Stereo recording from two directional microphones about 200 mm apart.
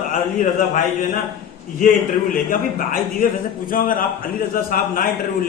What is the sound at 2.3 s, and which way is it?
A man's voice, 45° left (ahead or behind).